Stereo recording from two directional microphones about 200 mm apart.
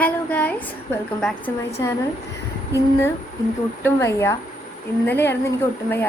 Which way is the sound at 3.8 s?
15° left (ahead or behind).